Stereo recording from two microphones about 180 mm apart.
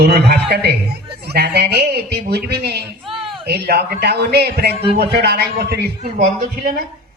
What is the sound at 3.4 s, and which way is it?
Speech, 65° right (ahead or behind).